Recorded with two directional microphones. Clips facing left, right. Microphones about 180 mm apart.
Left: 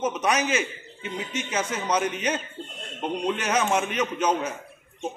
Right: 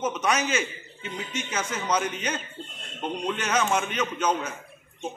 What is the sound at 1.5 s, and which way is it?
A man's voice, 15° left (ahead or behind).